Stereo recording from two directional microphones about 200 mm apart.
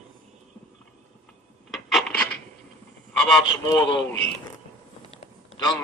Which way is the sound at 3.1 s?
Centre (ahead or behind).